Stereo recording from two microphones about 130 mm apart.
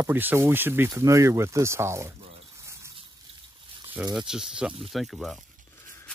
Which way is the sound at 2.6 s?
20° right (ahead or behind).